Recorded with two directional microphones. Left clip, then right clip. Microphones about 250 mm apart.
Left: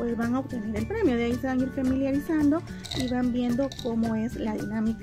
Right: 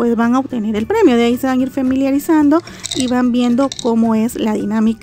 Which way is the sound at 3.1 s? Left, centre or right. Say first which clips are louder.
Right 13 dB; right.